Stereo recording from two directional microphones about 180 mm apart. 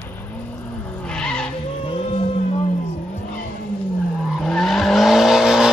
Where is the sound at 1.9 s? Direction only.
30° left (ahead or behind).